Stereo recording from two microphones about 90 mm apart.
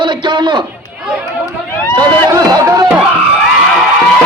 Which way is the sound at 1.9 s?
45° right (ahead or behind).